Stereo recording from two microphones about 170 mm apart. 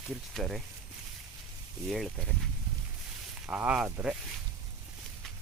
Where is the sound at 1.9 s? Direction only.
Centre (ahead or behind).